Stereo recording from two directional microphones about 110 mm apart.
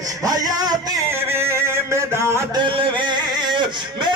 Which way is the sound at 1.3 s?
25° right (ahead or behind).